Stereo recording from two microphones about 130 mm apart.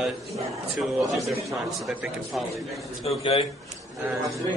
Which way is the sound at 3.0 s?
50° left (ahead or behind).